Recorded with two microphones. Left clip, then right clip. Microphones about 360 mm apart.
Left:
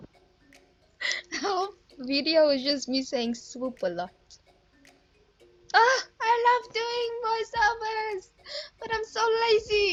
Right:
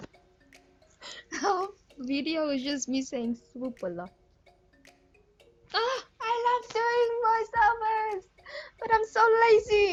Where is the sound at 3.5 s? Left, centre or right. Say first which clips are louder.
Left 5 dB; left.